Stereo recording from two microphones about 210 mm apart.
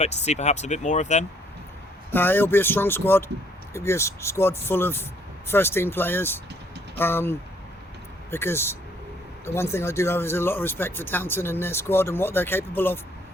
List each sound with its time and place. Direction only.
0.0 s speech: 30° left (ahead or behind)
2.1 s speech: 10° left (ahead or behind)